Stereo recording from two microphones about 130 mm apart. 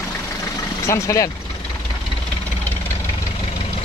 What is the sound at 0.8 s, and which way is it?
Speech, 25° left (ahead or behind).